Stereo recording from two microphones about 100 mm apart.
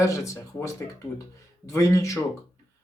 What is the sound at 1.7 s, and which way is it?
Speech, 30° left (ahead or behind).